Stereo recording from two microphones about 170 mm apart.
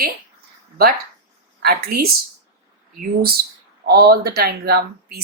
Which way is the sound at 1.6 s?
65° right (ahead or behind).